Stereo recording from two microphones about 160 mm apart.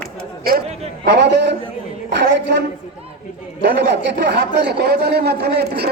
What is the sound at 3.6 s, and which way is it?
Speech, 90° right.